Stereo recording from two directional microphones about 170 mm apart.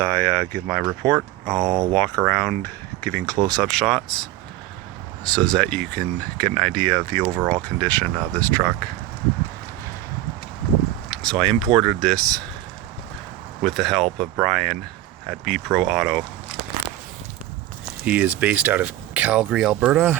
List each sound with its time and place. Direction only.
0.0 s speech: 10° left (ahead or behind)
1.7 s speech: 20° right (ahead or behind)
2.0 s speech: 5° left (ahead or behind)
11.1 s speech: 5° left (ahead or behind)
13.6 s speech: centre (ahead or behind)
18.0 s speech: 10° right (ahead or behind)